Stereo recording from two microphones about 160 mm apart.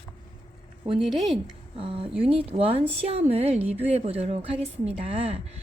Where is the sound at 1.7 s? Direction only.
35° right (ahead or behind).